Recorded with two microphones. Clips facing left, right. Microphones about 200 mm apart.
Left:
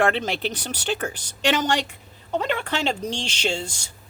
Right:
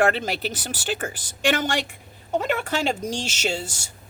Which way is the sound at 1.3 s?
50° right (ahead or behind).